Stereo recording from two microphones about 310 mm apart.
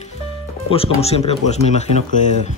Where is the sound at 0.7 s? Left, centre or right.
Centre.